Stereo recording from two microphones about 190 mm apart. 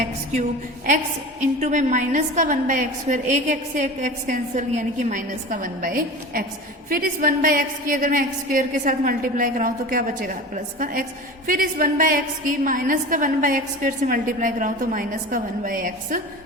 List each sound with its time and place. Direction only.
1.4 s a woman's voice: 40° right (ahead or behind)
11.4 s a woman's voice: 45° right (ahead or behind)